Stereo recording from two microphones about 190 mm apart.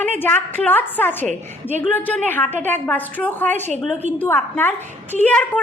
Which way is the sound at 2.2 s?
10° left (ahead or behind).